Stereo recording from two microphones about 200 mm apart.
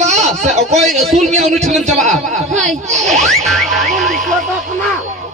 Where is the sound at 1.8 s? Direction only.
35° right (ahead or behind).